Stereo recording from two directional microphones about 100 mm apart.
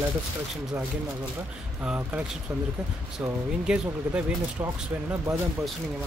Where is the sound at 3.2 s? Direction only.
15° right (ahead or behind).